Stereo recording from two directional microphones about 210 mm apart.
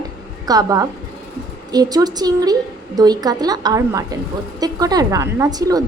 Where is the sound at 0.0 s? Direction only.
15° right (ahead or behind).